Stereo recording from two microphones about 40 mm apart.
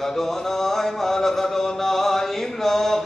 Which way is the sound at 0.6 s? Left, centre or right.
Centre.